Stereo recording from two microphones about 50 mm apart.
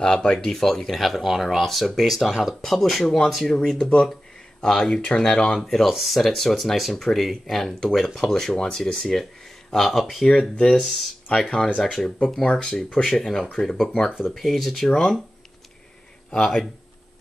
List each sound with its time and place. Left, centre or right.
0.2 s speech: centre
2.6 s speech: centre
3.4 s speech: centre
13.0 s speech: centre
15.0 s speech: centre
16.3 s speech: centre